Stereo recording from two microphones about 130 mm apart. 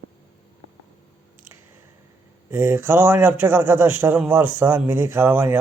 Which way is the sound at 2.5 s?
20° right (ahead or behind).